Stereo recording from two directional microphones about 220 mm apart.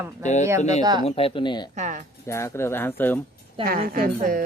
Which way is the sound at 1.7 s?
35° right (ahead or behind).